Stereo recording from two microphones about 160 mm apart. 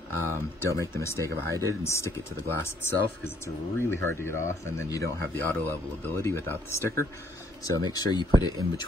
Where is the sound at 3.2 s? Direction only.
15° left (ahead or behind).